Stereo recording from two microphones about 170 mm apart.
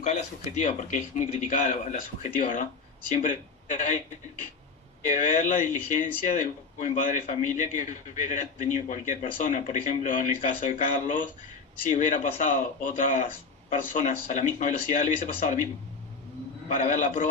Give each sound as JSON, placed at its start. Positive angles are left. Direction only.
{"t": 0.5, "sound": "a man's voice", "side_deg": 45}
{"t": 5.0, "sound": "a man's voice", "side_deg": 45}
{"t": 16.6, "sound": "a man's voice", "side_deg": 45}